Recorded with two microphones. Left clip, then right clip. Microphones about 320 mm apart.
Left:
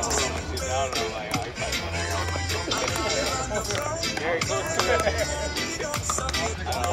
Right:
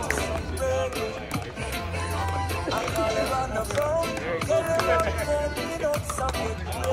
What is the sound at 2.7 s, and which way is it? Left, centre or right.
Music, centre.